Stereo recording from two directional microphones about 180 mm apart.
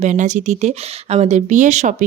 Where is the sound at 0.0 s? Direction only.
40° right (ahead or behind).